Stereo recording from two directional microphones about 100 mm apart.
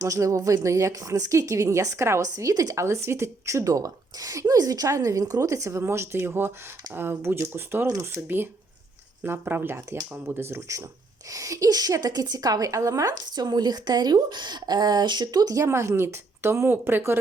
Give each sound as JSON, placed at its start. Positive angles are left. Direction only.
{"t": 0.0, "sound": "a woman's voice", "side_deg": -35}
{"t": 7.9, "sound": "a woman's voice", "side_deg": -35}
{"t": 9.2, "sound": "a woman's voice", "side_deg": -20}